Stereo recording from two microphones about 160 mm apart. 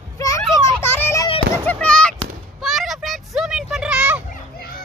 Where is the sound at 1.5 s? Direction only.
10° left (ahead or behind).